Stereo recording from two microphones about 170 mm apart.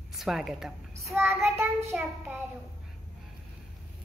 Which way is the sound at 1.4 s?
15° right (ahead or behind).